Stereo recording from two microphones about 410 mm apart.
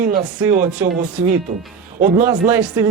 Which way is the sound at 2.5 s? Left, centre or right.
Centre.